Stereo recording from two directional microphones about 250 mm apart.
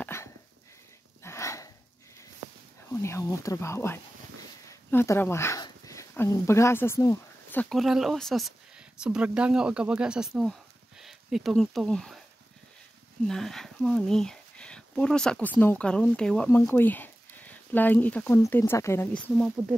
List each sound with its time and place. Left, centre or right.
0.0 s dog: centre
1.2 s a sound: centre
2.9 s speech: centre
7.7 s speech: centre
13.3 s speech: centre